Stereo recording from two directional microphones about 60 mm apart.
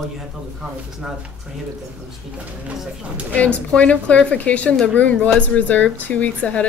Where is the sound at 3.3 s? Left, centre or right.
Left.